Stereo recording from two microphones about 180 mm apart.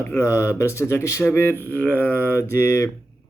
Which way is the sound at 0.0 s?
15° left (ahead or behind).